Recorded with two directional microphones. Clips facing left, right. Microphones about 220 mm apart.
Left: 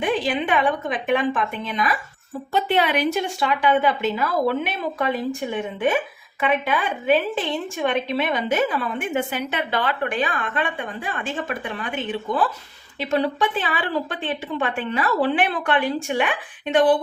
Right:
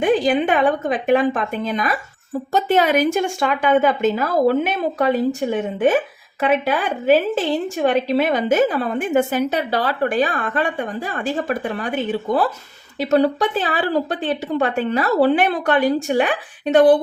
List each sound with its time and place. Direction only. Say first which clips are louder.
0.0 s a woman's voice: right 6 dB; 45° right (ahead or behind)